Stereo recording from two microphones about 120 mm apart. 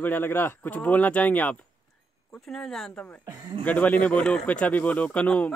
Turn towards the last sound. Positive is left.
turn(degrees=10)  # may be behind; listen again after turning